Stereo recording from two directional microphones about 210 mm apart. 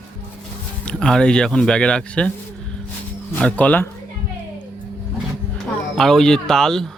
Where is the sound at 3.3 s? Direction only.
5° left (ahead or behind).